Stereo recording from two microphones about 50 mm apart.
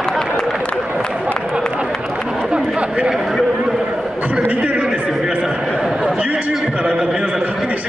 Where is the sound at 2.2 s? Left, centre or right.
Centre.